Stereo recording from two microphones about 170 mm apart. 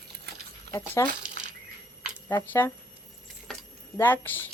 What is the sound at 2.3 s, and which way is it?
Speech, 15° left (ahead or behind).